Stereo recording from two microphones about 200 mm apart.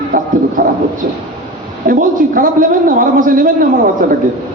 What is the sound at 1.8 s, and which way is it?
A man's voice, 45° right (ahead or behind).